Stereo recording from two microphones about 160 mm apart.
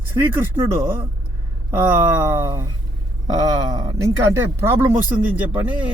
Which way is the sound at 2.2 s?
15° right (ahead or behind).